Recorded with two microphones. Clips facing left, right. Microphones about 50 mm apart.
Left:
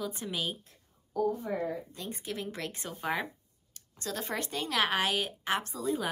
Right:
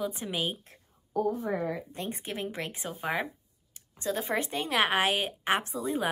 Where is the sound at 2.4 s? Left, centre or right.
Right.